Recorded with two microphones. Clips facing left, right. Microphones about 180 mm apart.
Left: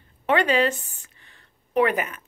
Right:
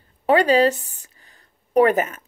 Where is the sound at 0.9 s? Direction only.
35° right (ahead or behind).